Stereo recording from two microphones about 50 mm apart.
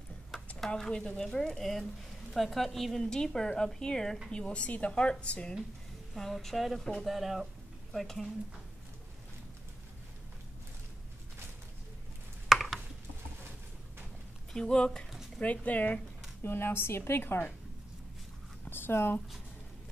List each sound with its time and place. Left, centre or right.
0.6 s a sound: centre
1.1 s a woman's voice: centre
6.1 s a woman's voice: centre
12.4 s chopping: centre
14.5 s a woman's voice: centre
15.4 s speech: left
16.4 s a woman's voice: left
18.7 s speech: left